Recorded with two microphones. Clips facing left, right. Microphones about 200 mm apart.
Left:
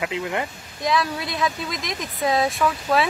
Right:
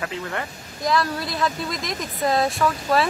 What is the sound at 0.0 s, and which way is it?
Speech, 15° left (ahead or behind).